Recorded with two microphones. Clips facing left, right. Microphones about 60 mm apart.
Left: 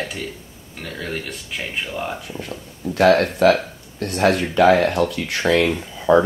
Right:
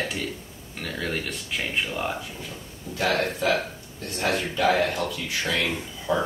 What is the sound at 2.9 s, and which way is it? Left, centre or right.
Speech, left.